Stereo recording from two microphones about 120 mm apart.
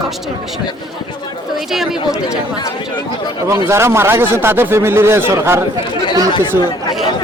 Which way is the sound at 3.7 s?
20° right (ahead or behind).